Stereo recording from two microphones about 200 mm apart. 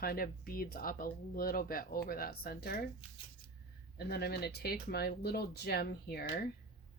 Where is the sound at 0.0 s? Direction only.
50° left (ahead or behind).